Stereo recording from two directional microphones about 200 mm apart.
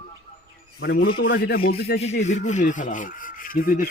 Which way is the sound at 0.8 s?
55° left (ahead or behind).